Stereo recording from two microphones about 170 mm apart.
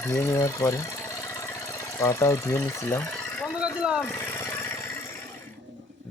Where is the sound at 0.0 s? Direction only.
15° left (ahead or behind).